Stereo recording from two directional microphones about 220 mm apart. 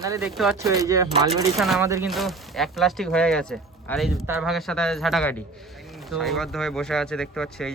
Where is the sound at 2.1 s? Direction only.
Centre (ahead or behind).